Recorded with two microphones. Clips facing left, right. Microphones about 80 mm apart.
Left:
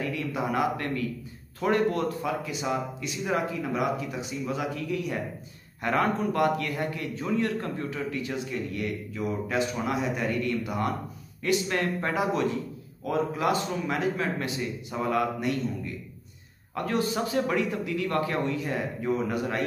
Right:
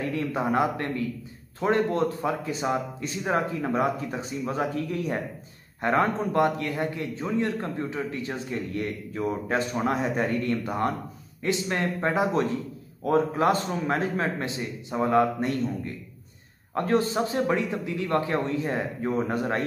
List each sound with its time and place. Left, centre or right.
0.0 s a man's voice: right